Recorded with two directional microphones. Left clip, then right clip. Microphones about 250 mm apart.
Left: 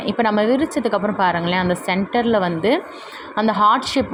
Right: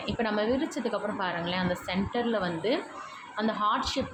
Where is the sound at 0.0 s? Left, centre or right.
Left.